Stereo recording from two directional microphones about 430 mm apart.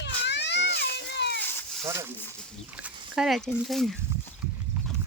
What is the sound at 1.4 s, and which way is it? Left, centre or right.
Cat, centre.